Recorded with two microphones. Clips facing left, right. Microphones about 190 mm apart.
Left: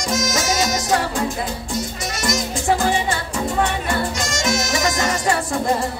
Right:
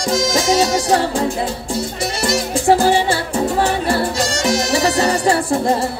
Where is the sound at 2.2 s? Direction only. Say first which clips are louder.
Right 5 dB; 30° right (ahead or behind).